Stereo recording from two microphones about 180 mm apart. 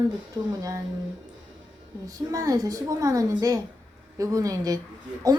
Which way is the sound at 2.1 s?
20° right (ahead or behind).